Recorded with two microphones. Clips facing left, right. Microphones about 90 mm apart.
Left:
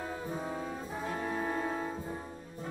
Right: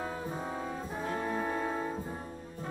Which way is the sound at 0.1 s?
5° right (ahead or behind).